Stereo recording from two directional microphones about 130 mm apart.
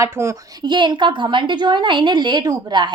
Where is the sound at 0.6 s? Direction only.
35° right (ahead or behind).